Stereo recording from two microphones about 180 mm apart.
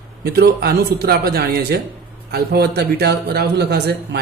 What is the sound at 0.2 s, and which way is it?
A man's voice, 60° right (ahead or behind).